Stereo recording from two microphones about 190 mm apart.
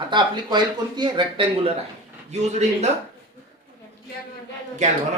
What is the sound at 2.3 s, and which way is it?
Speech, 35° right (ahead or behind).